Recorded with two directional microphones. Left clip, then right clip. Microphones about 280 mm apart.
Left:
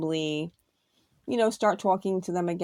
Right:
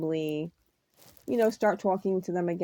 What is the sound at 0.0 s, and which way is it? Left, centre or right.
Speech, left.